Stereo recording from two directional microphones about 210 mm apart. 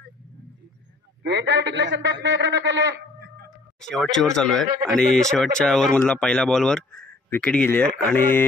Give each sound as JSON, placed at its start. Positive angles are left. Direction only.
{"t": 1.2, "sound": "a man's voice", "side_deg": -55}
{"t": 3.8, "sound": "speech", "side_deg": 0}